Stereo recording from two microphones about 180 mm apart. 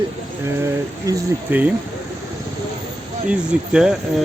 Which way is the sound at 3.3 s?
5° right (ahead or behind).